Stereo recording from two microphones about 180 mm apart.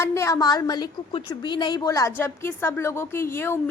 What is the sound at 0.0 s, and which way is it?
A woman's voice, 15° left (ahead or behind).